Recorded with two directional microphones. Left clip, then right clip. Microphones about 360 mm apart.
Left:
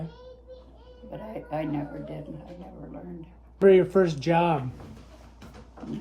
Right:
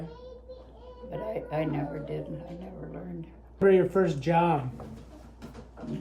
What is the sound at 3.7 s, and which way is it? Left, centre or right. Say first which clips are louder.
Speech: left 4 dB; left.